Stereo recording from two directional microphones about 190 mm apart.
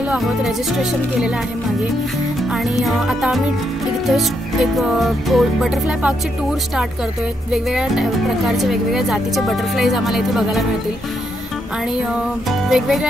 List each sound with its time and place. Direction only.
0.1 s speech: 5° right (ahead or behind)
2.8 s speech: centre (ahead or behind)
7.5 s speech: 5° right (ahead or behind)
12.6 s speech: centre (ahead or behind)